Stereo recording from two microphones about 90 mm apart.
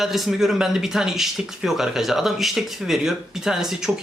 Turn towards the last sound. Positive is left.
turn(degrees=-5)  # may be behind; listen again after turning